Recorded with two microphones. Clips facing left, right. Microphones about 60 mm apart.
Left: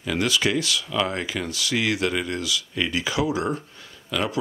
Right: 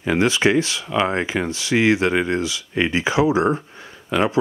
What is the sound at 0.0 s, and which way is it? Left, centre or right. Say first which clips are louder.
Speech: right 6 dB; right.